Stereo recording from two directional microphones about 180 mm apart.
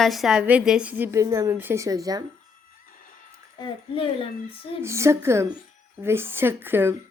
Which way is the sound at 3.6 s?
30° left (ahead or behind).